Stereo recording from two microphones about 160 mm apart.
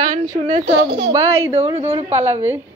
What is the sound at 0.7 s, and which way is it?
Speech, 90° right.